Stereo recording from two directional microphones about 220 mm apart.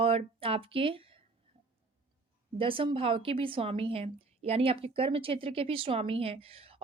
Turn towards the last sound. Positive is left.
turn(degrees=-25)  # may be behind; listen again after turning